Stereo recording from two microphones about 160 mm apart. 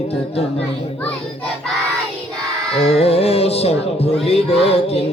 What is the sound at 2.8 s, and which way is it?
Music, 40° left (ahead or behind).